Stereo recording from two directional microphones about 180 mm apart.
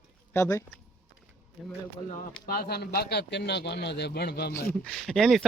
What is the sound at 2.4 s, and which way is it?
Speech, 55° left (ahead or behind).